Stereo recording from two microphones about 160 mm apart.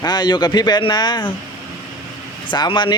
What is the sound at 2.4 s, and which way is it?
Speech, 30° left (ahead or behind).